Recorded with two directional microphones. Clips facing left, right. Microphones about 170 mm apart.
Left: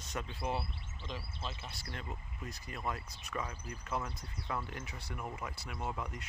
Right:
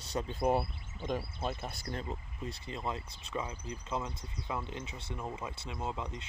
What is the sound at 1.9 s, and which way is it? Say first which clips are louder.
Speech: right 5 dB; 30° right (ahead or behind).